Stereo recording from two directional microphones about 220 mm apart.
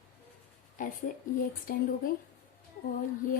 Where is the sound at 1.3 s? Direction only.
40° left (ahead or behind).